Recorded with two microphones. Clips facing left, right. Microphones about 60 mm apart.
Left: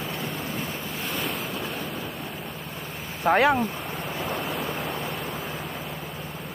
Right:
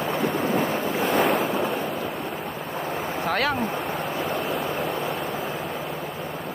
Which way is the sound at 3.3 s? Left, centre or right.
Left.